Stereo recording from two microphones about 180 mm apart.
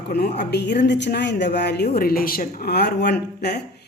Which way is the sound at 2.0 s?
55° left (ahead or behind).